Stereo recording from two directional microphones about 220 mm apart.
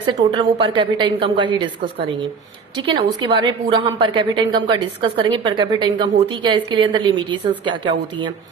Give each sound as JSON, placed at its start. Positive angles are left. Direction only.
{"t": 0.0, "sound": "a woman's voice", "side_deg": -20}
{"t": 2.7, "sound": "a woman's voice", "side_deg": -20}